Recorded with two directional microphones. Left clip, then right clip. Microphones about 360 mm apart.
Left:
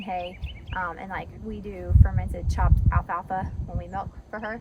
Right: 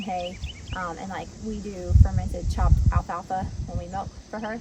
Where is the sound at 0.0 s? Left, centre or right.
Centre.